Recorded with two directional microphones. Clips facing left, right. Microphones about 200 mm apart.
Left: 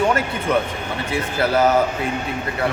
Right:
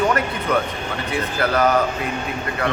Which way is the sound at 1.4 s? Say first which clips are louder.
Left 2 dB; 25° left (ahead or behind).